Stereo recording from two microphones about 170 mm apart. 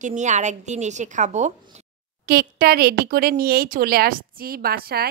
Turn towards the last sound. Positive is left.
turn(degrees=-65)  # may be behind; listen again after turning